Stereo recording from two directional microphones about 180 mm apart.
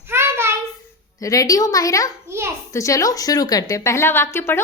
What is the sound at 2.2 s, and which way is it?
Speech, 15° right (ahead or behind).